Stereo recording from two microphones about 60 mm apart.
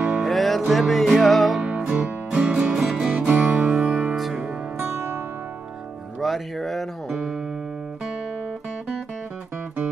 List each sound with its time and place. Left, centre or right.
0.2 s music: centre
1.7 s music: centre
3.3 s music: centre
4.1 s music: centre
4.7 s music: right
6.1 s speech: centre